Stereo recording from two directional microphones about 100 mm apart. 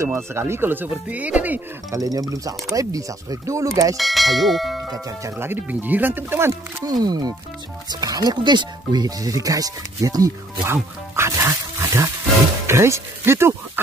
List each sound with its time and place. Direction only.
0.0 s speech: 25° right (ahead or behind)
1.9 s speech: 35° right (ahead or behind)
3.9 s speech: centre (ahead or behind)
4.9 s speech: 35° right (ahead or behind)
5.4 s speech: 20° right (ahead or behind)
6.9 s speech: 45° right (ahead or behind); by 13.6 s 25° right (ahead or behind)